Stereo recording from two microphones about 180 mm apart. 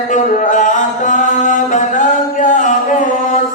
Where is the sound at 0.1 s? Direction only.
45° left (ahead or behind).